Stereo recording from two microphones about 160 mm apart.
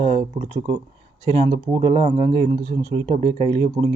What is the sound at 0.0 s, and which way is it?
Speech, 40° right (ahead or behind).